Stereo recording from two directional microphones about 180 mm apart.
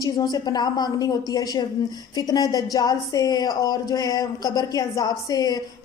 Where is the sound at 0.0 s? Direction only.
20° left (ahead or behind).